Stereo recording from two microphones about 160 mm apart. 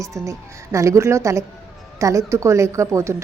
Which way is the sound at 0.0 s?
20° right (ahead or behind).